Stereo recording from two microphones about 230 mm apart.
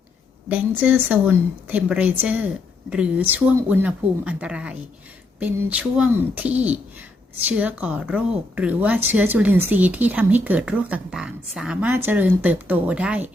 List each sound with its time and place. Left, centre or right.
0.4 s a woman's voice: centre